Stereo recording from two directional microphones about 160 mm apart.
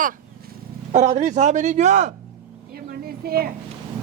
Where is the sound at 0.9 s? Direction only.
45° right (ahead or behind).